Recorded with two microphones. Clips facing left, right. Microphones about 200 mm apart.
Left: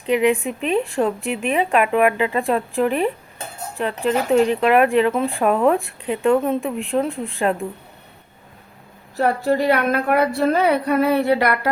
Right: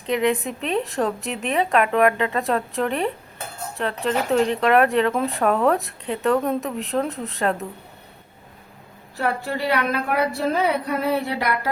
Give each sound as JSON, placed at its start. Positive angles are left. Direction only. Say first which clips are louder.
{"t": 0.0, "sound": "a woman's voice", "louder": "left 4 dB", "side_deg": 10}
{"t": 9.1, "sound": "a woman's voice", "louder": "left 6 dB", "side_deg": 40}